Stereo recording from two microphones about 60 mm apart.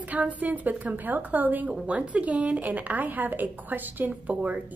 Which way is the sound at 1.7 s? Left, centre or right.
Centre.